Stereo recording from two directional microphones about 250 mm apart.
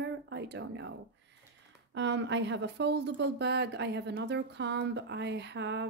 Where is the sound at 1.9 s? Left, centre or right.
Right.